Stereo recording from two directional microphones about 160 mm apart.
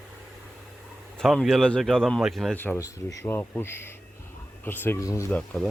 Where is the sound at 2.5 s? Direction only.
10° left (ahead or behind).